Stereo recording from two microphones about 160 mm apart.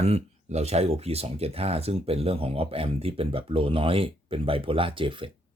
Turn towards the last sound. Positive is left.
turn(degrees=-30)  # may be behind; listen again after turning